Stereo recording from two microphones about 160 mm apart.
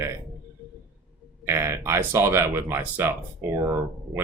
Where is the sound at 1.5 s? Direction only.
15° right (ahead or behind).